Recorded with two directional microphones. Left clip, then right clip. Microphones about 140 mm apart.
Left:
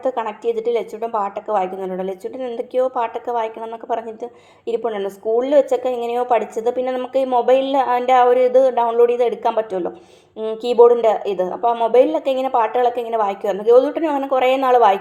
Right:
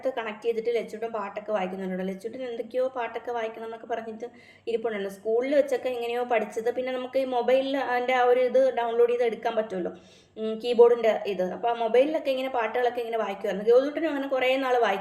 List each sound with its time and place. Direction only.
0.0 s a woman's voice: 35° left (ahead or behind)